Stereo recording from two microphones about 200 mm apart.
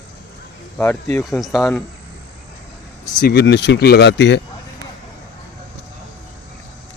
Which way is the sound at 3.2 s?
55° left (ahead or behind).